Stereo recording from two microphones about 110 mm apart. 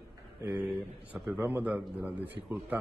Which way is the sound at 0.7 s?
5° right (ahead or behind).